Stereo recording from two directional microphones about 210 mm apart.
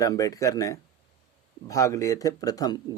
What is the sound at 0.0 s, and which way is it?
Speech, 15° left (ahead or behind).